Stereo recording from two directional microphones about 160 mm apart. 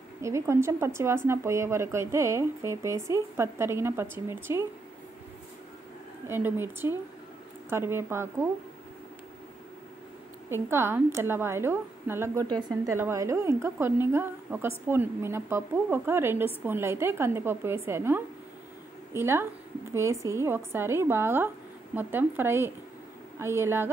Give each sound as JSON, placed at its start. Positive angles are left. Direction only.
{"t": 0.2, "sound": "speech", "side_deg": -15}
{"t": 6.2, "sound": "speech", "side_deg": -15}
{"t": 10.5, "sound": "speech", "side_deg": -15}
{"t": 12.4, "sound": "a woman's voice", "side_deg": -25}
{"t": 12.9, "sound": "speech", "side_deg": -15}